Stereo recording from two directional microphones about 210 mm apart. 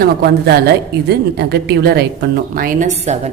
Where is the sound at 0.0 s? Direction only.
50° right (ahead or behind).